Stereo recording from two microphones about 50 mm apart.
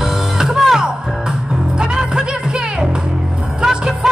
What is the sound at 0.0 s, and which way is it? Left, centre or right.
Music, centre.